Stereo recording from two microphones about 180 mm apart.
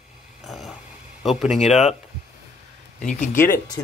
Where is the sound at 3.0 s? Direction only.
45° left (ahead or behind).